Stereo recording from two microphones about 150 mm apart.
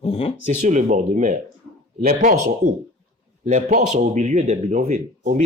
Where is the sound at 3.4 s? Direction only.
60° right (ahead or behind).